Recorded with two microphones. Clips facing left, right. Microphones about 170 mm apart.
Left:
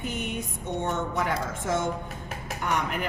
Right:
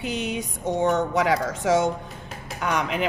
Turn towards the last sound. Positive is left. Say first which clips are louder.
# right 4 dB
turn(degrees=-90)